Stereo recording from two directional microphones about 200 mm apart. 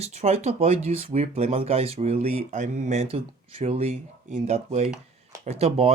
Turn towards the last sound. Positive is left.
turn(degrees=-30)  # may be behind; listen again after turning